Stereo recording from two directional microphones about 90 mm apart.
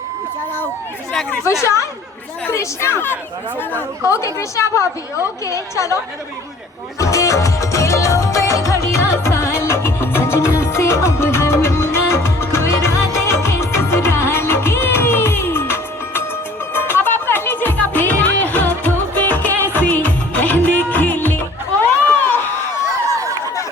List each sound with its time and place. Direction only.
1.6 s a woman's voice: 35° left (ahead or behind)
7.0 s music: 35° left (ahead or behind)
23.0 s a sound: 35° right (ahead or behind)